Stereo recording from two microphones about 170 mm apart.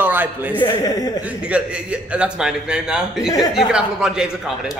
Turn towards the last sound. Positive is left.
turn(degrees=-5)  # may be behind; listen again after turning